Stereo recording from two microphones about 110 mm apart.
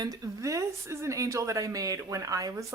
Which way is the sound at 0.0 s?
30° right (ahead or behind).